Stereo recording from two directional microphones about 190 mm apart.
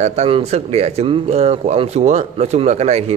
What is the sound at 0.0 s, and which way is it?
A man's voice, 35° right (ahead or behind).